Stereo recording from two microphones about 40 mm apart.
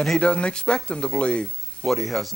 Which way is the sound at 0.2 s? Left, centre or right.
Left.